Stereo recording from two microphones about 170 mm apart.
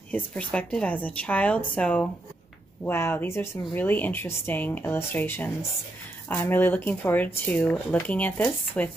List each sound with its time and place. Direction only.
0.1 s speech: 10° left (ahead or behind)